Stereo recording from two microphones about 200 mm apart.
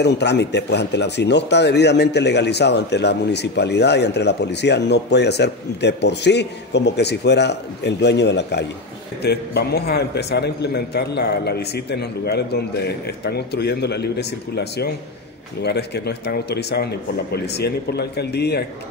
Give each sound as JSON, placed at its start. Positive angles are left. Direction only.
{"t": 0.0, "sound": "speech", "side_deg": 60}